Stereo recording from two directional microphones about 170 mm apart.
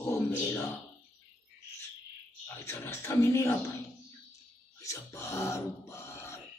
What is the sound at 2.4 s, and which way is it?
Speech, 15° left (ahead or behind).